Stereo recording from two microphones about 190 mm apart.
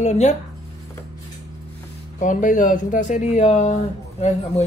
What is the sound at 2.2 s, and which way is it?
A man's voice, 40° left (ahead or behind).